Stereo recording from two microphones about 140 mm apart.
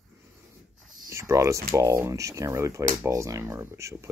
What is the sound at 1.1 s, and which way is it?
Speech, 20° right (ahead or behind).